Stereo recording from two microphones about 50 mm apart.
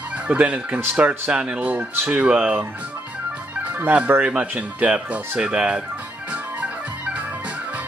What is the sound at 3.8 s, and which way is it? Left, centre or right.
Speech, right.